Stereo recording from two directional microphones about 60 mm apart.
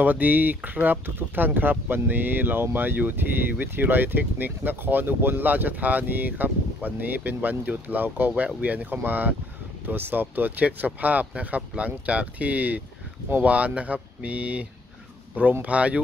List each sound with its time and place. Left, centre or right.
0.0 s speech: right